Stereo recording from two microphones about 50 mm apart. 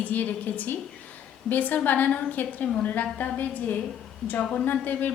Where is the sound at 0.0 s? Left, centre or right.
Left.